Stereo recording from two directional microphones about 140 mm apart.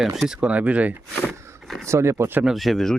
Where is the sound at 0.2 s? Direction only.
5° right (ahead or behind).